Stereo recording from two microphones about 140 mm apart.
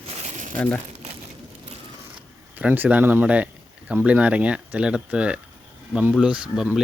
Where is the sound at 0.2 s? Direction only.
60° right (ahead or behind).